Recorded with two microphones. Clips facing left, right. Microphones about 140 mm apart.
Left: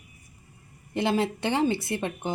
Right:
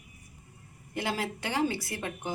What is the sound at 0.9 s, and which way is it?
Speech, 25° left (ahead or behind).